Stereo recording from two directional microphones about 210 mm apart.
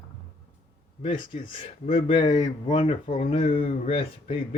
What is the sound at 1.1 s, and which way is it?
Speech, 25° left (ahead or behind).